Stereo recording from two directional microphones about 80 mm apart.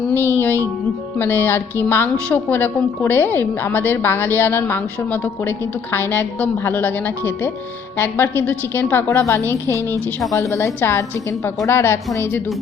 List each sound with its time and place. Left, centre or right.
0.1 s a woman's voice: left
9.0 s a woman's voice: left
9.7 s a woman's voice: right
10.3 s a woman's voice: left